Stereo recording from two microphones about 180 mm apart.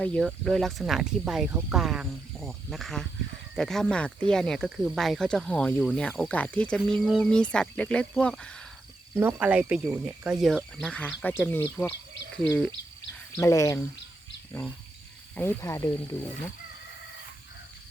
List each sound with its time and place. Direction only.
0.0 s speech: 5° left (ahead or behind)
9.1 s speech: 10° right (ahead or behind)
13.4 s speech: 20° left (ahead or behind)
15.4 s speech: 15° left (ahead or behind)